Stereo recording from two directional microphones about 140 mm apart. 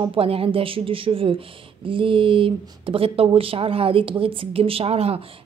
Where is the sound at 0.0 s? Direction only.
40° right (ahead or behind).